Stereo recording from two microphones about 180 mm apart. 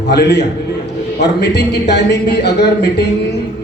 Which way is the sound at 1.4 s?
70° left (ahead or behind).